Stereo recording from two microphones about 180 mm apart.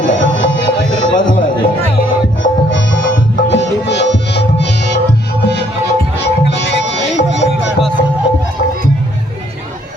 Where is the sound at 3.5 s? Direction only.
80° left.